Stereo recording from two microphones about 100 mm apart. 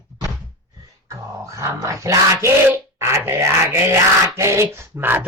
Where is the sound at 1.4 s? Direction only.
30° right (ahead or behind).